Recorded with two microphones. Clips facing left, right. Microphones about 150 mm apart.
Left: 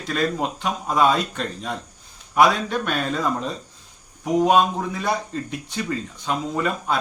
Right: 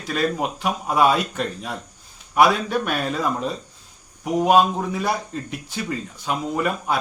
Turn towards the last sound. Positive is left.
turn(degrees=-10)  # may be behind; listen again after turning